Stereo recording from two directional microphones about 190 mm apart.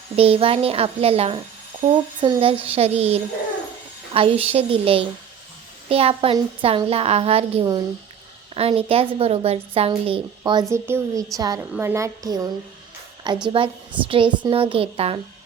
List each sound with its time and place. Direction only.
0.2 s a woman's voice: 30° right (ahead or behind)